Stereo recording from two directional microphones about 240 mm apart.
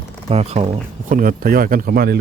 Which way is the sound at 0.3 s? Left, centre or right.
Right.